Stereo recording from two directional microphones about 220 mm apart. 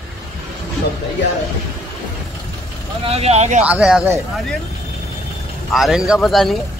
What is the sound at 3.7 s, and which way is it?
Speech, centre (ahead or behind).